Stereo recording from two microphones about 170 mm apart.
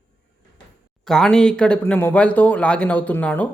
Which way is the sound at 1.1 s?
5° left (ahead or behind).